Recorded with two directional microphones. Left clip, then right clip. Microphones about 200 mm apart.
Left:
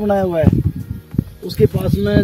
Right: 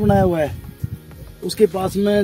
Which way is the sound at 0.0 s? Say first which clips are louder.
Left 1 dB; 25° right (ahead or behind).